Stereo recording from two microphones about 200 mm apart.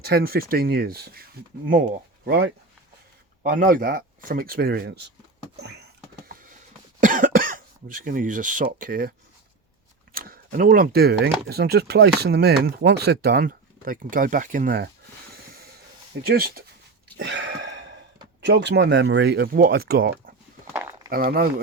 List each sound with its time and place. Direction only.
0.0 s speech: 50° right (ahead or behind)
5.5 s a sound: 55° right (ahead or behind)
7.0 s speech: 40° right (ahead or behind)
10.2 s speech: 45° right (ahead or behind)
16.2 s speech: 50° right (ahead or behind)
17.2 s a sound: 65° right (ahead or behind)
18.3 s speech: 60° right (ahead or behind)
20.7 s a sound: 10° right (ahead or behind)
21.1 s speech: 45° right (ahead or behind)